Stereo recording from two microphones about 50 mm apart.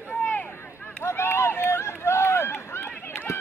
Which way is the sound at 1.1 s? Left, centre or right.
Left.